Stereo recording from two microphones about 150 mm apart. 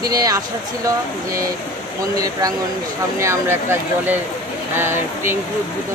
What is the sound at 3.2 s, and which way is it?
Speech, 20° right (ahead or behind).